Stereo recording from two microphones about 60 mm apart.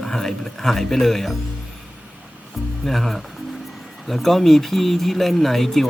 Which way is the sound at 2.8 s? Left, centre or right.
Centre.